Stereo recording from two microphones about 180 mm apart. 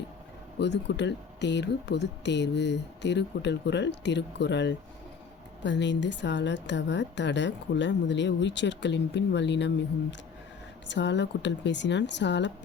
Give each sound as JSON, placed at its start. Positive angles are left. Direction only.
{"t": 0.6, "sound": "a woman's voice", "side_deg": 75}